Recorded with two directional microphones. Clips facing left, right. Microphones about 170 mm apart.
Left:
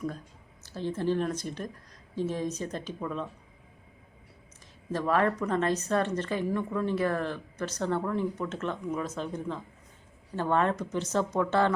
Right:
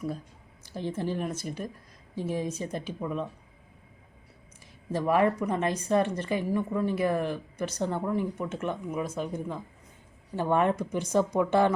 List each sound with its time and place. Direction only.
0.6 s speech: 15° right (ahead or behind)
4.9 s speech: 15° right (ahead or behind)